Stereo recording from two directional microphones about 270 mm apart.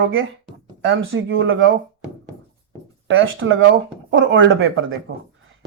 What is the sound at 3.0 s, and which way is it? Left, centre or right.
A man's voice, right.